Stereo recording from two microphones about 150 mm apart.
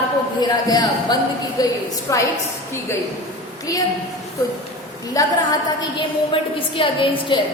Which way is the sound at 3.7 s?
20° left (ahead or behind).